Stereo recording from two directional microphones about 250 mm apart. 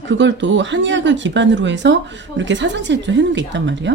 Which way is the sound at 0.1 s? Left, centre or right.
Right.